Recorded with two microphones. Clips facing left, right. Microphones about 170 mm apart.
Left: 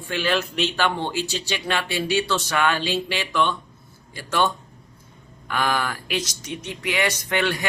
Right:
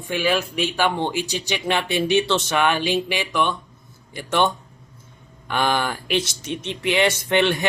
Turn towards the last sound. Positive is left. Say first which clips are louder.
# right 4 dB
turn(degrees=-25)  # may be behind; listen again after turning